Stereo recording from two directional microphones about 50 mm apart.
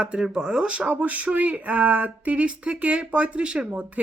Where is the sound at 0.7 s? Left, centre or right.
Right.